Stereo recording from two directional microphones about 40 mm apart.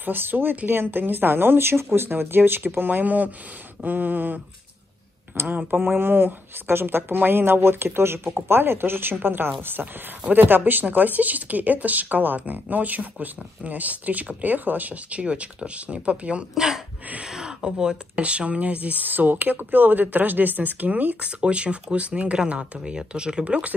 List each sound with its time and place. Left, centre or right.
0.0 s speech: right
5.8 s speech: right
16.5 s speech: centre
18.1 s speech: right
21.2 s speech: right